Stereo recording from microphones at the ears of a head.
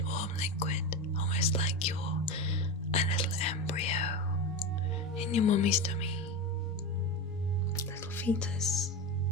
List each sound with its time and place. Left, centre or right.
0.1 s whispering: left
1.2 s speech: left
3.8 s whispering: left
5.3 s speech: left
7.8 s music: left